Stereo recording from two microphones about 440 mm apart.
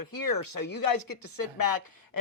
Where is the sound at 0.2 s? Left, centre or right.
Left.